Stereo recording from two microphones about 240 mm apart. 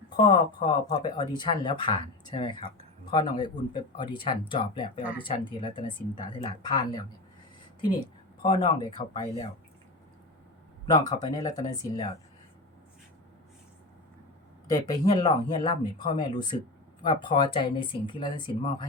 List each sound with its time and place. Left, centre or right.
0.2 s speech: centre
10.8 s speech: centre
14.7 s speech: centre